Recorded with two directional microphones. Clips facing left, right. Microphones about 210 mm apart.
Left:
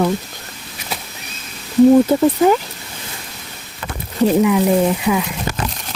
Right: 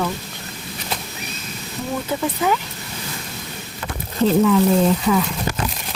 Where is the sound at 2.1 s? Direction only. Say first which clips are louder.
Left 8 dB; 40° left (ahead or behind).